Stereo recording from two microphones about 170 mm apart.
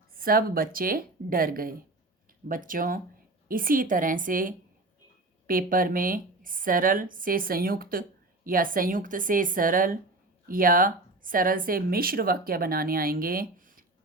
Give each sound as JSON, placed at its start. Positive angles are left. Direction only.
{"t": 0.1, "sound": "a woman's voice", "side_deg": -60}